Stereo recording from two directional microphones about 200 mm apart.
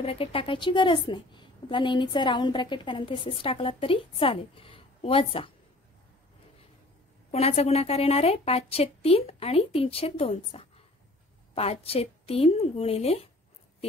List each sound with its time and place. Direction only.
0.0 s a woman's voice: 30° left (ahead or behind)
7.2 s a woman's voice: 30° left (ahead or behind)